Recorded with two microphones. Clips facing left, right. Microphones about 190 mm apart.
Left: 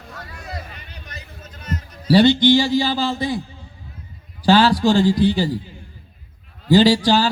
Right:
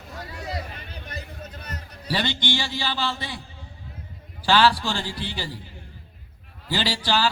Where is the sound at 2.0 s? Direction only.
40° left (ahead or behind).